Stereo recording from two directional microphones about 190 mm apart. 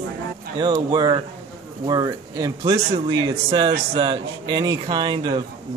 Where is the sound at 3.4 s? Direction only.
30° right (ahead or behind).